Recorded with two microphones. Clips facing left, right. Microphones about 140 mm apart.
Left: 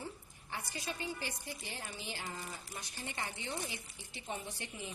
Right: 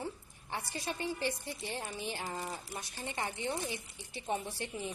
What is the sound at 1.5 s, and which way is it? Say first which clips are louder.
A woman's voice: right 5 dB; 20° right (ahead or behind).